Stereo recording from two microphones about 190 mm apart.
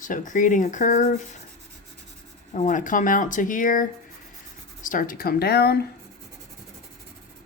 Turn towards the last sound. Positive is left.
turn(degrees=55)  # may be behind; listen again after turning